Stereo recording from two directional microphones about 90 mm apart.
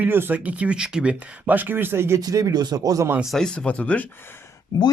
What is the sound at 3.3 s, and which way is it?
Speech, 10° left (ahead or behind).